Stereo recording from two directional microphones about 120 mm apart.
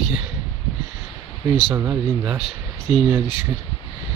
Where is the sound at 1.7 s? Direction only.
15° right (ahead or behind).